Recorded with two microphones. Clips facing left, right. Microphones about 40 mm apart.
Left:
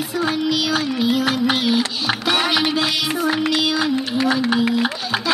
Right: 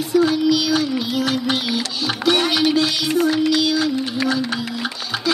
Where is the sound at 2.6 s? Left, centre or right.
Centre.